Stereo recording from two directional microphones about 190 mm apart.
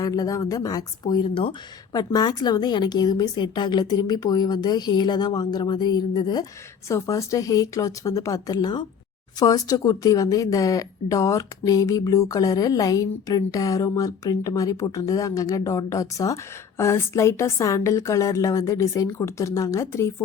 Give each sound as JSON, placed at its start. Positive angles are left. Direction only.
{"t": 0.0, "sound": "speech", "side_deg": 20}